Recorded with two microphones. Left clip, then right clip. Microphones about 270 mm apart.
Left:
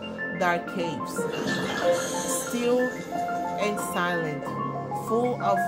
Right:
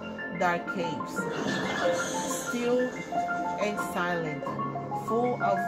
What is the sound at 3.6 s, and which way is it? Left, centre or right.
Speech, centre.